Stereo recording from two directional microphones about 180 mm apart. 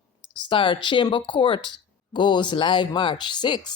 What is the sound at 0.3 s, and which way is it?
Speech, 25° left (ahead or behind).